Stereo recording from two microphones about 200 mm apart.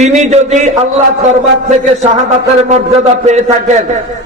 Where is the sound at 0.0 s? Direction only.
35° right (ahead or behind).